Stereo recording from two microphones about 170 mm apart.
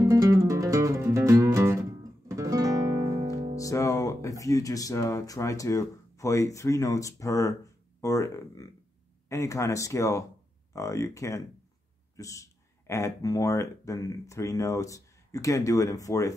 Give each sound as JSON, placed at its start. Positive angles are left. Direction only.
{"t": 0.0, "sound": "music", "side_deg": -20}
{"t": 3.5, "sound": "speech", "side_deg": 20}